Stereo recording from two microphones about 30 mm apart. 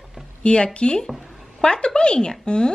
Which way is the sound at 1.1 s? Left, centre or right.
Centre.